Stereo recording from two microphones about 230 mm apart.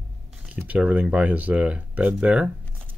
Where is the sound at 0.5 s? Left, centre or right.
Centre.